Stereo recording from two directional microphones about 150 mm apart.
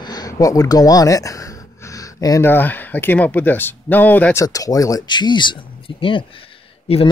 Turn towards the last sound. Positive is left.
turn(degrees=40)  # may be behind; listen again after turning